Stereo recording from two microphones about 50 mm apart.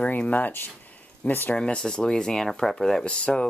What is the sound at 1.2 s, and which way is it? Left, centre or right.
Speech, left.